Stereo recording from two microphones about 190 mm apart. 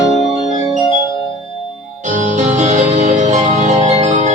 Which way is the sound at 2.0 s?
40° right (ahead or behind).